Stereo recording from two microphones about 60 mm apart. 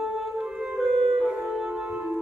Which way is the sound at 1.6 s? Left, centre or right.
Centre.